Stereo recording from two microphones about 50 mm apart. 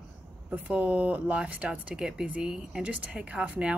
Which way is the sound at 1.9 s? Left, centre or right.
Centre.